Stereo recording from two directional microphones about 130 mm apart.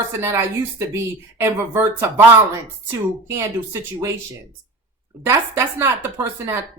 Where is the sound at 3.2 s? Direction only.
20° right (ahead or behind).